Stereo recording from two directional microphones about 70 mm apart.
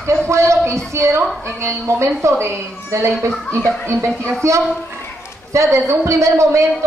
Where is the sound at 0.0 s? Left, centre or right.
Right.